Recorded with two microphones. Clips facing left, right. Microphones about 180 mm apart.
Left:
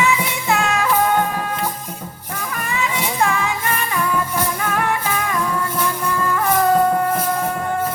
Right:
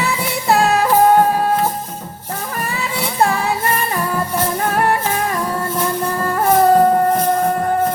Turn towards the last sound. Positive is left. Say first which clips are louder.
# right 4 dB
turn(degrees=-40)  # may be behind; listen again after turning